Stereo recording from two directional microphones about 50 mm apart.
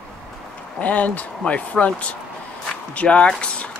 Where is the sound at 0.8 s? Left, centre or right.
Left.